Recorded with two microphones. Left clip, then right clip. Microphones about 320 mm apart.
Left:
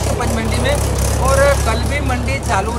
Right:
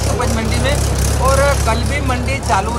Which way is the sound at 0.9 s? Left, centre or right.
Centre.